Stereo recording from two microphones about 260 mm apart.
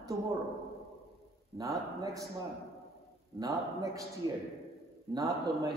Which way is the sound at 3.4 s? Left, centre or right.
Centre.